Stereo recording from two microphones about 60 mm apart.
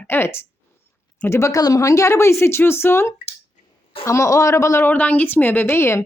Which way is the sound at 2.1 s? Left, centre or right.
Left.